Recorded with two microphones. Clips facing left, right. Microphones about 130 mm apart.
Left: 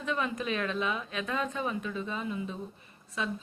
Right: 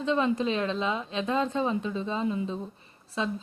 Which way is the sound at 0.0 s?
25° right (ahead or behind).